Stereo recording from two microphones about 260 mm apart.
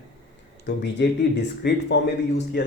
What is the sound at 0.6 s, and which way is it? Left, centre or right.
Speech, left.